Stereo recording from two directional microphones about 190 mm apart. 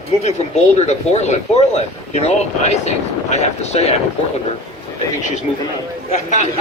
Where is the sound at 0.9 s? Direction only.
35° left (ahead or behind).